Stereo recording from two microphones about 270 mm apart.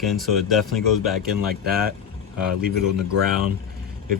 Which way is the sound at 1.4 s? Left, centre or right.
Right.